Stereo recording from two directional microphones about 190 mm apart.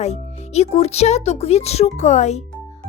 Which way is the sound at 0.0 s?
35° left (ahead or behind).